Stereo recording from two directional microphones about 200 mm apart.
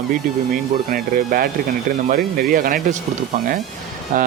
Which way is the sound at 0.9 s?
45° right (ahead or behind).